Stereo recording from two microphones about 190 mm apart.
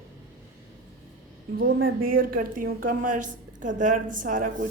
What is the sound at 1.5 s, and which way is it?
A woman's voice, 50° right (ahead or behind).